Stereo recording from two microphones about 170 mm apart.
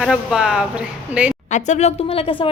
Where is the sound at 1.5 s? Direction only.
40° left (ahead or behind).